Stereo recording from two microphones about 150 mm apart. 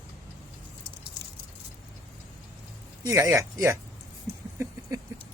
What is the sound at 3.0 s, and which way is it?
Speech, 20° right (ahead or behind).